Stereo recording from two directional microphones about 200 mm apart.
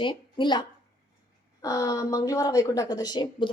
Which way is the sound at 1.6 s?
15° left (ahead or behind).